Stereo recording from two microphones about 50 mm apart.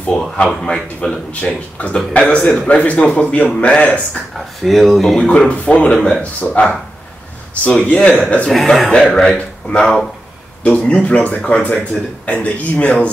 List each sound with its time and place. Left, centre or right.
0.2 s a man's voice: centre
1.3 s speech: left
4.6 s speech: centre
5.1 s a man's voice: centre
5.5 s speech: left
8.5 s a man's voice: centre; by 13.1 s left